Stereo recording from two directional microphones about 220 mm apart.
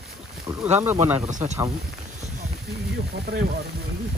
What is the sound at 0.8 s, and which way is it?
Speech, 10° right (ahead or behind).